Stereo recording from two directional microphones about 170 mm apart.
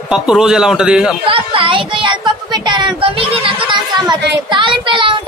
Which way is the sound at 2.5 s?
25° right (ahead or behind).